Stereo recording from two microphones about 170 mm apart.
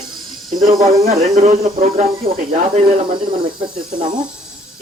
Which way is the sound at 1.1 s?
40° right (ahead or behind).